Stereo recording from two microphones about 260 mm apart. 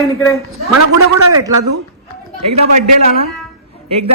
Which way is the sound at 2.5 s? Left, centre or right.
Right.